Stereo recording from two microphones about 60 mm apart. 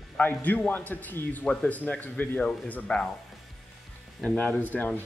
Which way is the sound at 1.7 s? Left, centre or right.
Left.